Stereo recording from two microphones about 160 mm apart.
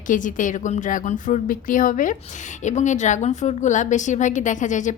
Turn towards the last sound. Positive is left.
turn(degrees=50)  # may be behind; listen again after turning